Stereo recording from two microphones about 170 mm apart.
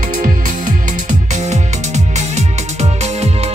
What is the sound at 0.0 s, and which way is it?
Music, 55° right (ahead or behind).